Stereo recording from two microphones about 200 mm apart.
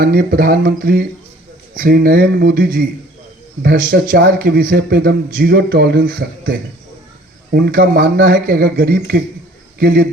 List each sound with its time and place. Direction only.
0.0 s speech: 45° right (ahead or behind)